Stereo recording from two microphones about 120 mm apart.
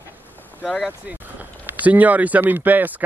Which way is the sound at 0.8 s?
10° right (ahead or behind).